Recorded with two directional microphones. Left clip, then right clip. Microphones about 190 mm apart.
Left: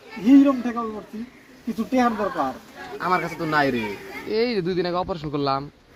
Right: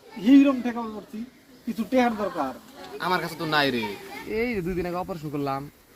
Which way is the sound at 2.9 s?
25° right (ahead or behind).